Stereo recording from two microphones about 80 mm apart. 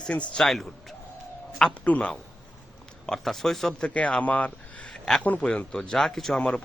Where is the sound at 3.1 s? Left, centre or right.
Centre.